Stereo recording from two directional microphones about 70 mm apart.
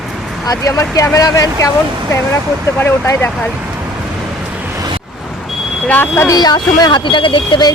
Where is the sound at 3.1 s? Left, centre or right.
Left.